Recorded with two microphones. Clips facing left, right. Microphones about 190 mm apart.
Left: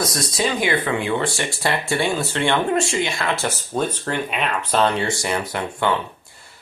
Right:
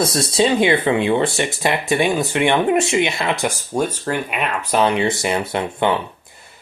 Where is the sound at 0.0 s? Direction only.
25° right (ahead or behind).